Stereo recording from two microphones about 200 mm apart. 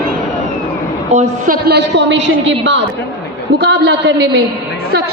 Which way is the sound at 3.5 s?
55° right (ahead or behind).